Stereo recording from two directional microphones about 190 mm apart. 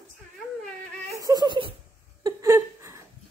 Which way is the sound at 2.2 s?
15° right (ahead or behind).